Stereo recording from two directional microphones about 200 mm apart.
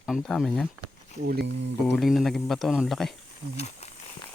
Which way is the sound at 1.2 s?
55° right (ahead or behind).